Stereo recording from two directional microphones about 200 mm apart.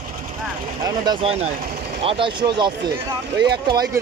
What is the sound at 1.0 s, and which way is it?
Speech, 30° right (ahead or behind).